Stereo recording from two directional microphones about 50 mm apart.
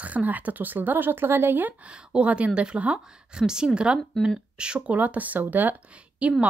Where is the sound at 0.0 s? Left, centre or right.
Right.